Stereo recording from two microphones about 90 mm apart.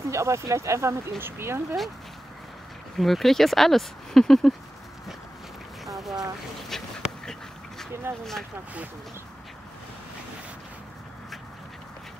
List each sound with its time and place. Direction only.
0.0 s speech: 35° right (ahead or behind)
3.0 s speech: centre (ahead or behind)
5.9 s boat: centre (ahead or behind)
6.7 s speech: 5° left (ahead or behind)
8.1 s speech: 25° right (ahead or behind)